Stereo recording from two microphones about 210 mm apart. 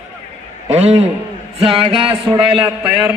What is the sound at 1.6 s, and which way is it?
Music, 25° right (ahead or behind).